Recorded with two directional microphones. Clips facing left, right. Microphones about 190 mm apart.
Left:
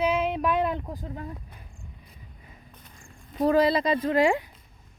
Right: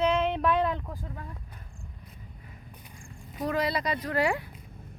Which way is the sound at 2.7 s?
15° right (ahead or behind).